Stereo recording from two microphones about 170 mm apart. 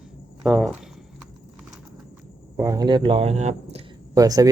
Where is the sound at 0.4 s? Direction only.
5° right (ahead or behind).